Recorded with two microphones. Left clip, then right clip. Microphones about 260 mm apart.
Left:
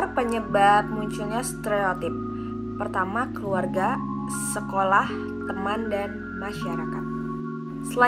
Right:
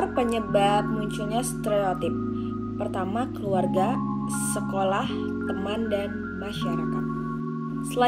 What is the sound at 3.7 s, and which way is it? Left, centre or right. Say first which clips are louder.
Music: even; centre.